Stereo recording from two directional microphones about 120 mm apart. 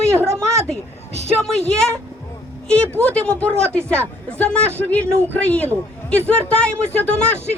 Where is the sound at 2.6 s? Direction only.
10° left (ahead or behind).